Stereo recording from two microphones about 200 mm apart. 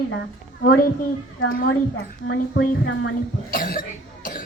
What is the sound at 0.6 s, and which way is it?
Speech, 50° left (ahead or behind).